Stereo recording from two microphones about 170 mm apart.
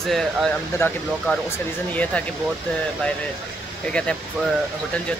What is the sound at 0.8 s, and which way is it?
Speech, 15° left (ahead or behind).